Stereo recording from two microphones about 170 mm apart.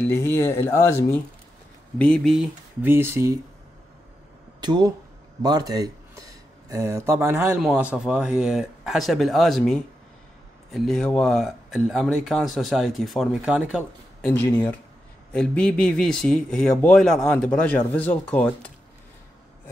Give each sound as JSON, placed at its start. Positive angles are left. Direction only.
{"t": 0.0, "sound": "speech", "side_deg": 15}
{"t": 2.0, "sound": "speech", "side_deg": 5}
{"t": 4.6, "sound": "speech", "side_deg": -25}
{"t": 15.3, "sound": "speech", "side_deg": 5}